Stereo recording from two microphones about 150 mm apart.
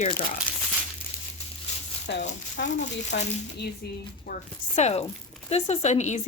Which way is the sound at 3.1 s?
90° left.